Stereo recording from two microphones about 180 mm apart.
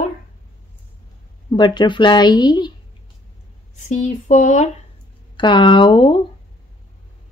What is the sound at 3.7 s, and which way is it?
Speech, 40° left (ahead or behind).